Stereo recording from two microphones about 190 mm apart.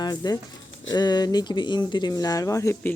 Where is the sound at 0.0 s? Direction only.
20° left (ahead or behind).